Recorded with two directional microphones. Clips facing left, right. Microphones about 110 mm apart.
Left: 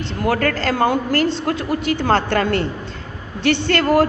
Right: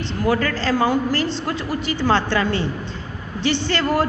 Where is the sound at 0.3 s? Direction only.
55° left (ahead or behind).